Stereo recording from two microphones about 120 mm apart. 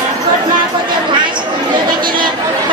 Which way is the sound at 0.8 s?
40° right (ahead or behind).